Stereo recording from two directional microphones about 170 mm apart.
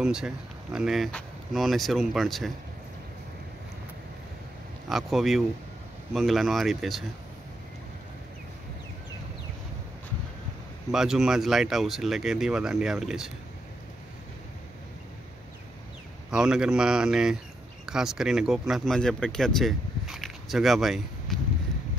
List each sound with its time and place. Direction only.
0.0 s speech: 5° right (ahead or behind)
4.8 s speech: centre (ahead or behind)
10.9 s speech: 5° right (ahead or behind)
16.3 s speech: 5° right (ahead or behind)